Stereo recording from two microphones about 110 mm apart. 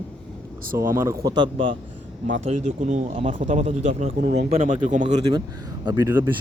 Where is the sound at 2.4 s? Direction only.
90° right.